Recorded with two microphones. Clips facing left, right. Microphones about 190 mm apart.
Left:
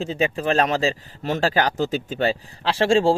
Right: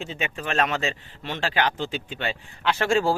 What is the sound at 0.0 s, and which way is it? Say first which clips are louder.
Speech: left 8 dB; 35° left (ahead or behind).